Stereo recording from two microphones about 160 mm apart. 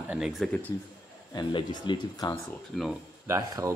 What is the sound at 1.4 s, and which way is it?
Speech, 30° left (ahead or behind).